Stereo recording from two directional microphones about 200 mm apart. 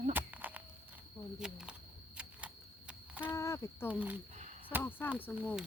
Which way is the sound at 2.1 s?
5° right (ahead or behind).